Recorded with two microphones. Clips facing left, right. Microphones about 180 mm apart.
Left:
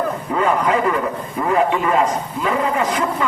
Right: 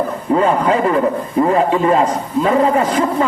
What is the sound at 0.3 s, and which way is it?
A man's voice, 30° right (ahead or behind).